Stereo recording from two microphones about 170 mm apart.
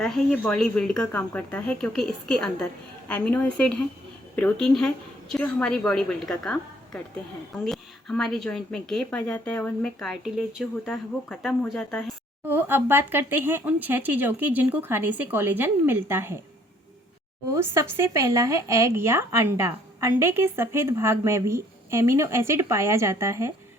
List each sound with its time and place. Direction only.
0.0 s speech: 5° left (ahead or behind)
12.5 s speech: 10° right (ahead or behind)
17.5 s speech: 15° right (ahead or behind)